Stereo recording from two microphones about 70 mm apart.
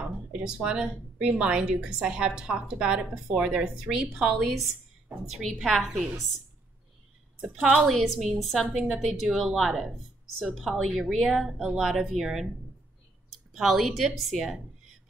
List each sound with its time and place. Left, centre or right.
0.0 s a sound: centre
0.7 s a woman's voice: centre
7.4 s a woman's voice: centre
7.7 s a woman's voice: centre
13.6 s a woman's voice: centre